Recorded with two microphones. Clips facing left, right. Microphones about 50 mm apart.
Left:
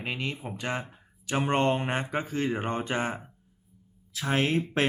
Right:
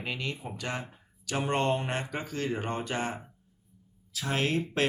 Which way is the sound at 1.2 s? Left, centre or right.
Left.